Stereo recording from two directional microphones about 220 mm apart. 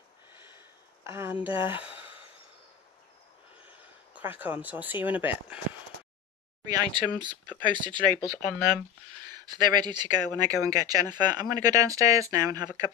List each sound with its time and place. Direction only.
1.0 s speech: 10° right (ahead or behind)
4.1 s speech: 10° right (ahead or behind)
6.6 s speech: 15° right (ahead or behind)